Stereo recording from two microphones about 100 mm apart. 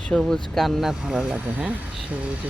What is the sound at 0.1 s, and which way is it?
Speech, 5° left (ahead or behind).